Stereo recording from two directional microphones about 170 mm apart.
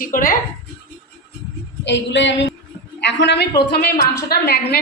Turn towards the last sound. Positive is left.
turn(degrees=65)  # may be behind; listen again after turning